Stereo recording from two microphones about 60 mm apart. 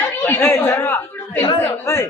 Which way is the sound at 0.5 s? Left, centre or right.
Left.